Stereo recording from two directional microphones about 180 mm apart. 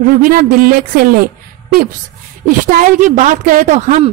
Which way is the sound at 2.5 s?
50° right (ahead or behind).